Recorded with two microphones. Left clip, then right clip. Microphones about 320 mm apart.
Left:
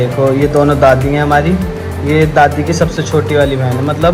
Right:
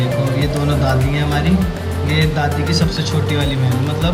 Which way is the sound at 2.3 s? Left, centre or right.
Centre.